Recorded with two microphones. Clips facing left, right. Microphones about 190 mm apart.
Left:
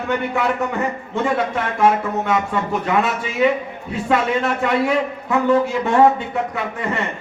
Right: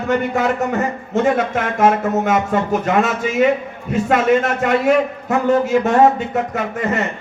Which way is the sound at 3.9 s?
45° right (ahead or behind).